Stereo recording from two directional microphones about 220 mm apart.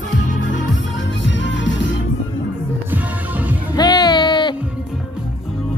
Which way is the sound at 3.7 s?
20° left (ahead or behind).